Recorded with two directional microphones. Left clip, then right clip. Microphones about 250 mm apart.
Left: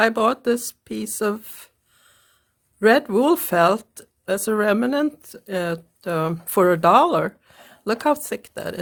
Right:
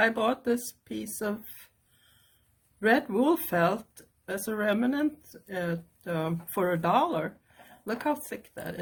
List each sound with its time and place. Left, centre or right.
0.0 s speech: left
2.8 s speech: left